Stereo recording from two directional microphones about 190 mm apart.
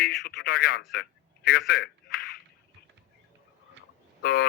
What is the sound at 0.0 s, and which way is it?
A man's voice, 55° left (ahead or behind).